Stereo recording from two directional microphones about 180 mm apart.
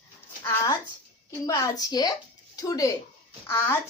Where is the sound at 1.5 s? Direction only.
20° left (ahead or behind).